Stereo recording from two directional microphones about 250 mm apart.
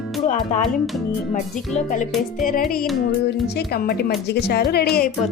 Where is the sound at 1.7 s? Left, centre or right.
Left.